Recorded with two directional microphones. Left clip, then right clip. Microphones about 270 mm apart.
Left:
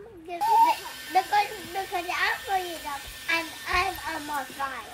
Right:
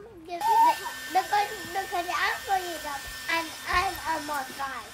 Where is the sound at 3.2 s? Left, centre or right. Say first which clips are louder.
Left 1 dB; centre.